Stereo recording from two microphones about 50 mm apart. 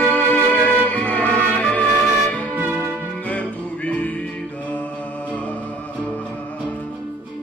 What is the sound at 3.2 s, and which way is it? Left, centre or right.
Music, left.